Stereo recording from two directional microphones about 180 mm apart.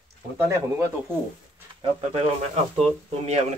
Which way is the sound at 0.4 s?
15° right (ahead or behind).